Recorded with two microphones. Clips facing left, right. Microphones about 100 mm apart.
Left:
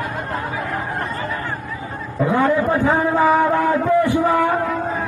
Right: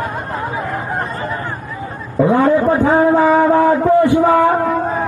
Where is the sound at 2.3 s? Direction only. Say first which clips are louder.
Right 4 dB; 30° right (ahead or behind).